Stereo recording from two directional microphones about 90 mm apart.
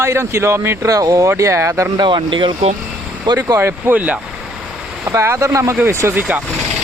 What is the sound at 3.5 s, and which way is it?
Speech, 25° right (ahead or behind).